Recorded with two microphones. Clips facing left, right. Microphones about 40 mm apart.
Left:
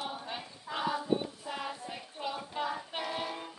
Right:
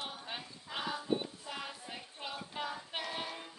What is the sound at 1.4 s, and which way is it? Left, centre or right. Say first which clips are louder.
Music: left 5 dB; centre.